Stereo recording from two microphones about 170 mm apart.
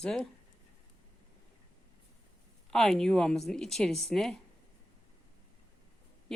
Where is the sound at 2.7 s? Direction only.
Centre (ahead or behind).